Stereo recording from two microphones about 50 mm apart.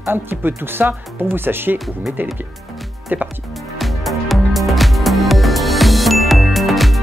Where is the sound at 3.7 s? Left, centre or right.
Centre.